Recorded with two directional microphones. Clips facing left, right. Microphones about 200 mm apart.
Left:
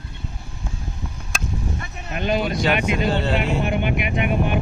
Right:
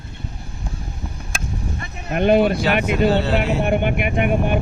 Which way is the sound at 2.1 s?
55° right (ahead or behind).